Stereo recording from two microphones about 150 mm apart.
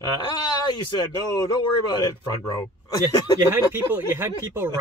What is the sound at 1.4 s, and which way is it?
Speech, 25° left (ahead or behind).